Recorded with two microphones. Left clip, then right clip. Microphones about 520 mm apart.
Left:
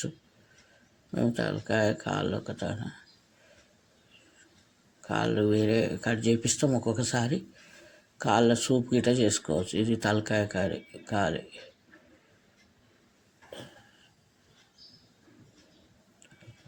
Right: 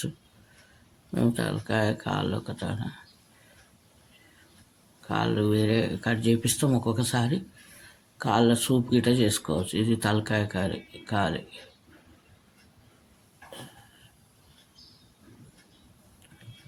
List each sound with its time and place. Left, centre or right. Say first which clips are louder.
1.1 s speech: right 1 dB; right
5.0 s speech: even; right